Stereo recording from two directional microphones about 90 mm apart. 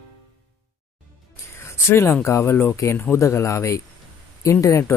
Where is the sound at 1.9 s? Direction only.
25° left (ahead or behind).